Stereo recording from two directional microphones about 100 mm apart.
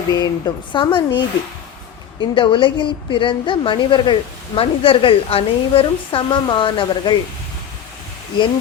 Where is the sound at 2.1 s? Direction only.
55° left (ahead or behind).